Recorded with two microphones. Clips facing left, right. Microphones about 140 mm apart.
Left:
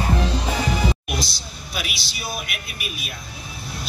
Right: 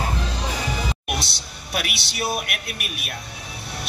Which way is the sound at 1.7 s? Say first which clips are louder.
Right 5 dB; 65° right (ahead or behind).